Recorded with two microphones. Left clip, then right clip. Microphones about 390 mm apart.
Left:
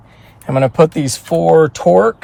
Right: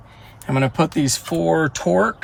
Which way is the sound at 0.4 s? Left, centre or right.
Centre.